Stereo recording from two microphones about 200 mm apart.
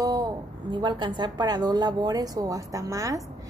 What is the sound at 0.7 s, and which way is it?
A woman's voice, 20° right (ahead or behind).